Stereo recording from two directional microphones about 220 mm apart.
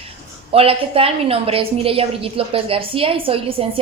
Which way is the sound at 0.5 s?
25° right (ahead or behind).